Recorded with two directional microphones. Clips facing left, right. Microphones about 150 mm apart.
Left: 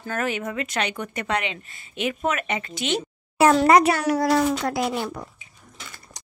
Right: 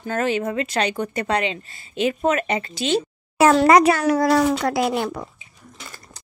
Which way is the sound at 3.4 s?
90° right.